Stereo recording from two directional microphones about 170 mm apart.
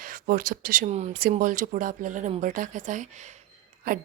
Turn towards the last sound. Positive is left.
turn(degrees=-50)  # may be behind; listen again after turning